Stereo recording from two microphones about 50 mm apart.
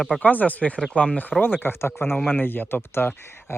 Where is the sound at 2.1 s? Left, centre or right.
Centre.